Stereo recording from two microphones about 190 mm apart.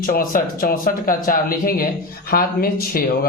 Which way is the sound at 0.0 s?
45° left (ahead or behind).